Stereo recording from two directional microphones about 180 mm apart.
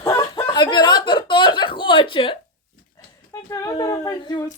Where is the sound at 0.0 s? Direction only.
20° left (ahead or behind).